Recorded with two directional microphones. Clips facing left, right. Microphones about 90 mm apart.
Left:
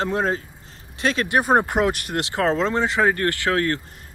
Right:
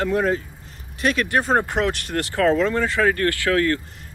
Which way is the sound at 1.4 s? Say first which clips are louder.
Left 4 dB; 15° left (ahead or behind).